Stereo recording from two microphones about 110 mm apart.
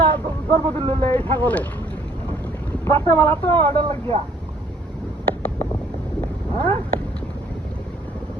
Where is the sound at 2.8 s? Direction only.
20° left (ahead or behind).